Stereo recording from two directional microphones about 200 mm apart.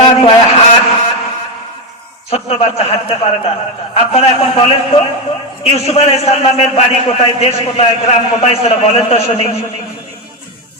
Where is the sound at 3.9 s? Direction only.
30° left (ahead or behind).